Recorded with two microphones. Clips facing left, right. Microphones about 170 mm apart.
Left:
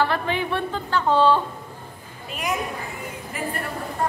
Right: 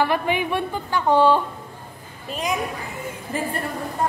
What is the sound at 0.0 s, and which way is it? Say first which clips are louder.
Speech: right 2 dB; 15° right (ahead or behind).